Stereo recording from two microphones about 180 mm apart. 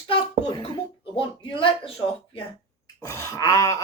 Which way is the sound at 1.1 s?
30° left (ahead or behind).